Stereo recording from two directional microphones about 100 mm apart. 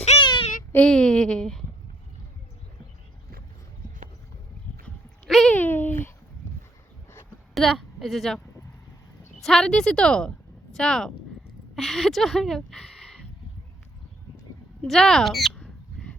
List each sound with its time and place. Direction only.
0.0 s child singing: 90° left
0.9 s a woman's voice: 10° left (ahead or behind)
5.2 s a sound: centre (ahead or behind)
5.5 s a sound: 20° left (ahead or behind)
7.5 s a woman's voice: centre (ahead or behind)
9.4 s a woman's voice: 5° left (ahead or behind)
14.8 s a woman's voice: 5° left (ahead or behind)
15.5 s squawk: 10° left (ahead or behind)